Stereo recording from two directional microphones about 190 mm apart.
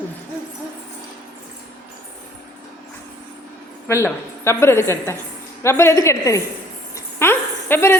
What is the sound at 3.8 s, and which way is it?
A woman's voice, 15° left (ahead or behind).